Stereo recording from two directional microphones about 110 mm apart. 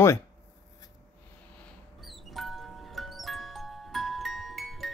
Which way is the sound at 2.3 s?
Centre (ahead or behind).